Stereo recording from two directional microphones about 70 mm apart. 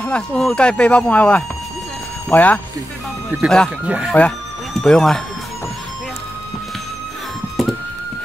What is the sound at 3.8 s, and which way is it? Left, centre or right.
Speech, centre.